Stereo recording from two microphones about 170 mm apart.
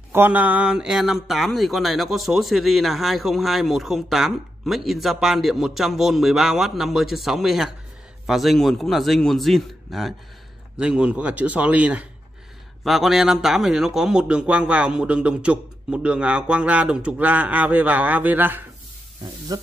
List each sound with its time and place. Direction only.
0.1 s a man's voice: 10° right (ahead or behind)
19.5 s speech: 20° right (ahead or behind)